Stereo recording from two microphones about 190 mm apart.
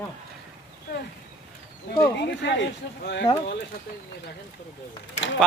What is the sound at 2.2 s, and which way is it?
Speech, 65° left (ahead or behind).